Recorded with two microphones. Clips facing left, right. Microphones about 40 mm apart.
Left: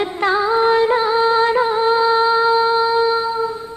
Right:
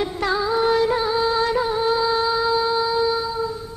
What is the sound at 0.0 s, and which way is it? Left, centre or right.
Music, left.